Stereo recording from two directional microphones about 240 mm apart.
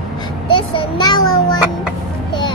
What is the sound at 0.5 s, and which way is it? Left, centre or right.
A child's voice, centre.